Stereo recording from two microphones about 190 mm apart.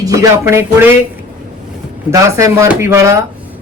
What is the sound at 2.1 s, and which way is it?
Speech, 15° right (ahead or behind).